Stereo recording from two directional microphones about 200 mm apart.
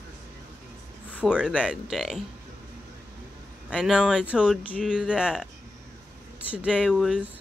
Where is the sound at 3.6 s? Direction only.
5° right (ahead or behind).